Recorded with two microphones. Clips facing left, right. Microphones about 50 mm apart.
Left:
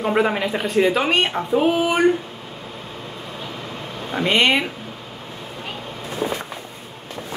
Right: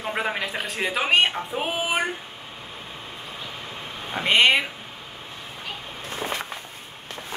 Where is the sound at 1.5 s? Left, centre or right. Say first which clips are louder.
Left 8 dB; centre.